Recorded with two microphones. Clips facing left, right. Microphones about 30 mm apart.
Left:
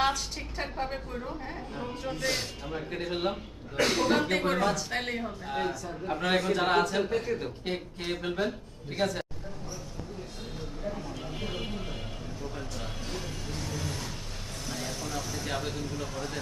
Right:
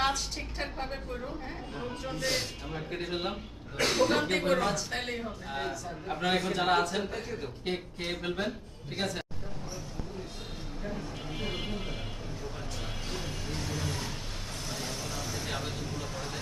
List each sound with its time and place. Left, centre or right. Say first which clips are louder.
0.0 s a sound: left 2 dB; centre
1.5 s speech: left 1 dB; centre
7.3 s speech: left 6 dB; centre
7.6 s speech: even; centre
10.9 s a sound: left 1 dB; centre
13.1 s music: right 1 dB; centre
13.5 s vehicle: right 1 dB; centre